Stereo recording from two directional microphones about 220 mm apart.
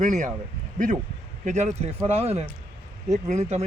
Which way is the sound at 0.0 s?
35° right (ahead or behind).